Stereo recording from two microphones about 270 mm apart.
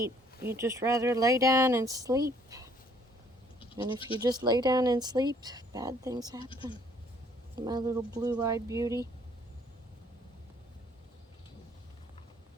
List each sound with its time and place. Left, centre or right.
0.4 s speech: centre
3.9 s speech: centre
4.2 s speech: centre
7.6 s speech: centre